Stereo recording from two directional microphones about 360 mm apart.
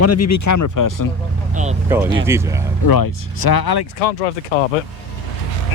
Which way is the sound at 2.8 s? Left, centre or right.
Left.